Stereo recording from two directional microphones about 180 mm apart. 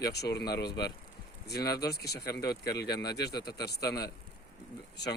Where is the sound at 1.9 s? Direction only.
65° left (ahead or behind).